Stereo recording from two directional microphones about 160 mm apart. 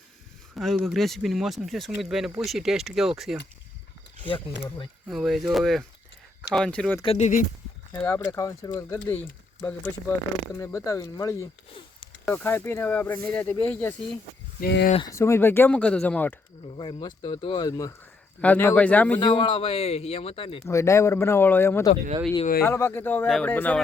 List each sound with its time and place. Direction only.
0.5 s speech: centre (ahead or behind)
5.0 s speech: centre (ahead or behind)
7.0 s speech: 40° left (ahead or behind)
7.9 s speech: 15° left (ahead or behind)
12.2 s speech: 10° left (ahead or behind)
14.6 s speech: 90° left
15.1 s speech: 15° left (ahead or behind)
16.7 s speech: 30° left (ahead or behind)
18.3 s speech: 10° left (ahead or behind)
19.2 s speech: 30° left (ahead or behind)
20.7 s speech: 20° left (ahead or behind)